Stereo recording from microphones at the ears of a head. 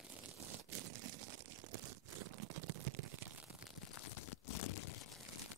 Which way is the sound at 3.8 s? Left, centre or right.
Left.